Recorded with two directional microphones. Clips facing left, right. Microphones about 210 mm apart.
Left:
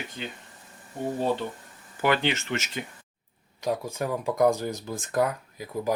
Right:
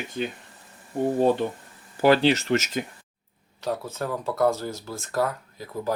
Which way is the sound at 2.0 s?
35° right (ahead or behind).